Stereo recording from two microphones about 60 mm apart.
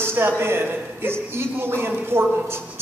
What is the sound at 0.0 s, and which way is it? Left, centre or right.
Speech, right.